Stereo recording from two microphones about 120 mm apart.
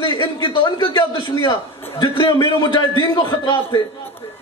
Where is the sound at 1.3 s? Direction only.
25° left (ahead or behind).